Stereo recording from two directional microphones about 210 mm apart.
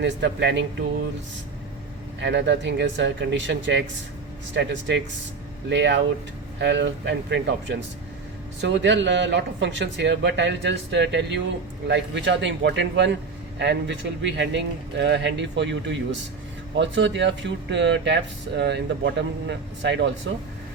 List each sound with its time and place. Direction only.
0.0 s speech: 55° right (ahead or behind)
2.2 s speech: 55° right (ahead or behind)